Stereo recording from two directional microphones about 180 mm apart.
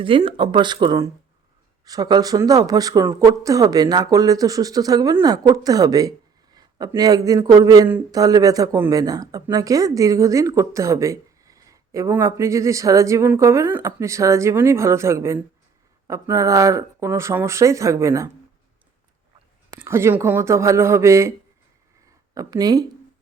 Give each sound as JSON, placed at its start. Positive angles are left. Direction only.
{"t": 0.0, "sound": "speech", "side_deg": -30}
{"t": 19.8, "sound": "speech", "side_deg": -15}
{"t": 22.4, "sound": "speech", "side_deg": -20}